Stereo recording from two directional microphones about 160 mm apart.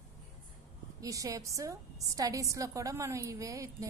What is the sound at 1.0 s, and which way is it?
A woman's voice, 20° right (ahead or behind).